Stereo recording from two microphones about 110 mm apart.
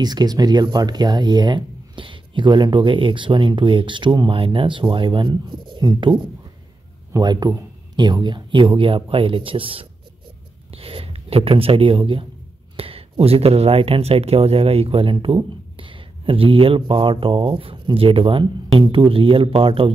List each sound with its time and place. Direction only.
0.0 s speech: 40° right (ahead or behind)
7.1 s speech: 35° right (ahead or behind); by 19.9 s 55° right (ahead or behind)